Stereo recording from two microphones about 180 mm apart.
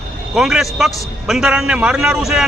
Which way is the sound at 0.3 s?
Centre (ahead or behind).